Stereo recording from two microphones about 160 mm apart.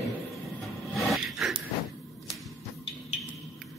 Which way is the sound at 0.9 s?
Centre (ahead or behind).